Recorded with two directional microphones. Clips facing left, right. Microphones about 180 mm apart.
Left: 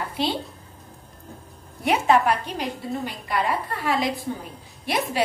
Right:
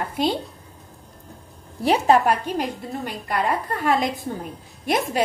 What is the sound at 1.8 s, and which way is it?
A woman's voice, 35° right (ahead or behind).